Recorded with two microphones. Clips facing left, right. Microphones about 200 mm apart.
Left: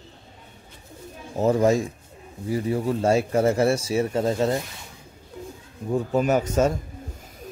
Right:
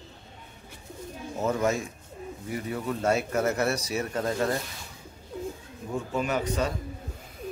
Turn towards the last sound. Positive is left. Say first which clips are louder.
# left 7 dB
turn(degrees=45)  # may be behind; listen again after turning